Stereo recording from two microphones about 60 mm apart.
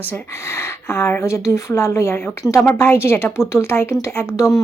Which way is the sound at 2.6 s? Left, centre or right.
Left.